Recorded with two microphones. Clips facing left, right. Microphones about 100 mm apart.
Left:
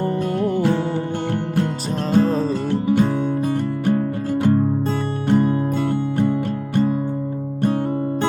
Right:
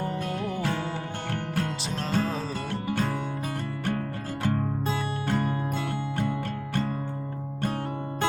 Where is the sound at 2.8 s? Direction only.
20° left (ahead or behind).